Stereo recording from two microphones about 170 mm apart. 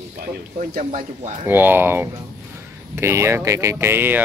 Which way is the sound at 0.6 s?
45° right (ahead or behind).